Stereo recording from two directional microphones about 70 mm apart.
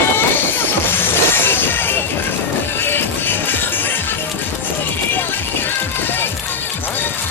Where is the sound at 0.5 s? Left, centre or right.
Left.